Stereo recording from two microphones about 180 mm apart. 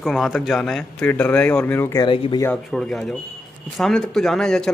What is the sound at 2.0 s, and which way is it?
Speech, 25° left (ahead or behind).